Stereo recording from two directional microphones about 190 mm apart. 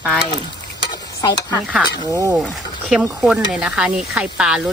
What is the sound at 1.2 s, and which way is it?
Speech, 20° left (ahead or behind).